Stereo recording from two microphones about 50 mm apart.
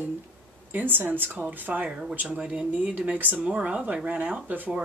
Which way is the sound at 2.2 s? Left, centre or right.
Right.